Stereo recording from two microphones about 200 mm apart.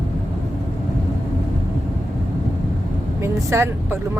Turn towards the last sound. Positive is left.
turn(degrees=-15)  # may be behind; listen again after turning